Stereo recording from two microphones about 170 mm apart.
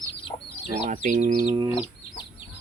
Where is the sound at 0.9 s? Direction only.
50° right (ahead or behind).